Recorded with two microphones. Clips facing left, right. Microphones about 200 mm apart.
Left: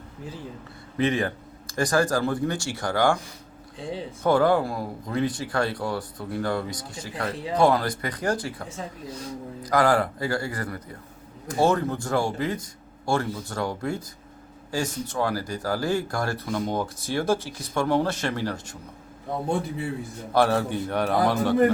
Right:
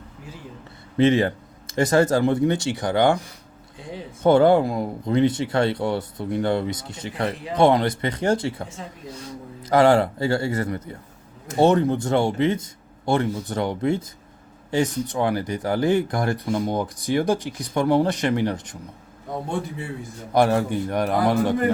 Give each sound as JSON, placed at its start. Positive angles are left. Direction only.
{"t": 0.9, "sound": "speech", "side_deg": -25}
{"t": 4.2, "sound": "speech", "side_deg": -25}
{"t": 9.6, "sound": "speech", "side_deg": -25}
{"t": 20.3, "sound": "a man's voice", "side_deg": -15}